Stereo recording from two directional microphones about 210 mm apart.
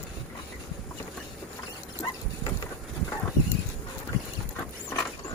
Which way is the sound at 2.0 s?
15° left (ahead or behind).